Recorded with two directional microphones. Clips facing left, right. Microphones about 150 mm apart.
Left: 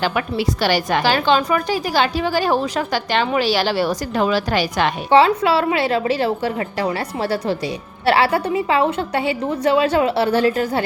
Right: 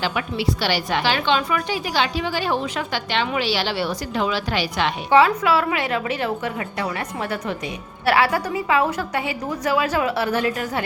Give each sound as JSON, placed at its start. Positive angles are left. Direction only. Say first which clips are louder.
{"t": 0.0, "sound": "a woman's voice", "louder": "left 3 dB", "side_deg": 45}
{"t": 5.1, "sound": "a woman's voice", "louder": "left 2 dB", "side_deg": 30}